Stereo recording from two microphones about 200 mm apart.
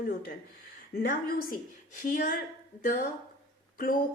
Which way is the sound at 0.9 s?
45° left (ahead or behind).